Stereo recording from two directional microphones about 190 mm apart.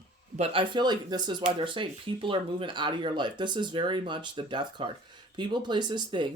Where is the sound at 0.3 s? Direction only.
25° right (ahead or behind).